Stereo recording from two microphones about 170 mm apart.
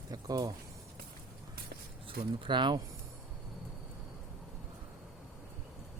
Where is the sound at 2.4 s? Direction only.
25° right (ahead or behind).